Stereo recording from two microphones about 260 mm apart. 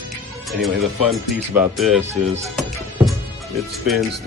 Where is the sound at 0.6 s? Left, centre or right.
Centre.